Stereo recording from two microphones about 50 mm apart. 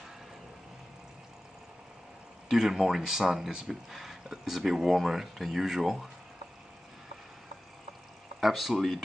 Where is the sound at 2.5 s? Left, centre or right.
Centre.